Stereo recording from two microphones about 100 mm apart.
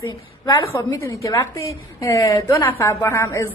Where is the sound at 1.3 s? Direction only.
35° left (ahead or behind).